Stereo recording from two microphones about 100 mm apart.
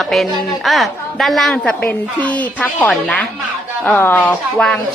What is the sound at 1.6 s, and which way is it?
Speech, 15° left (ahead or behind).